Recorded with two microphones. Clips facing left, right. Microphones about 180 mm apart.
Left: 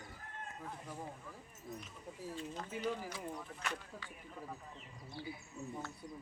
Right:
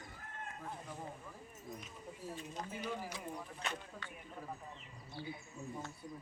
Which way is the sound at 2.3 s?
15° right (ahead or behind).